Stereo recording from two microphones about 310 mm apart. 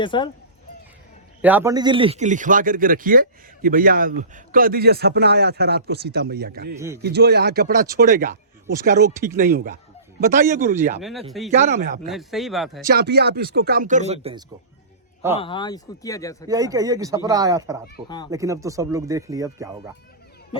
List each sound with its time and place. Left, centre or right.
0.0 s speech: centre
1.4 s a man's voice: centre; by 6.7 s right
6.7 s speech: centre
7.0 s a man's voice: right
11.0 s speech: centre
11.5 s a man's voice: right
12.0 s speech: centre
12.9 s a man's voice: right
15.4 s speech: centre
16.5 s speech: centre